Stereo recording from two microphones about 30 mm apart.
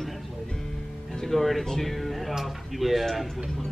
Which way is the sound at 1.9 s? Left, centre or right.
Centre.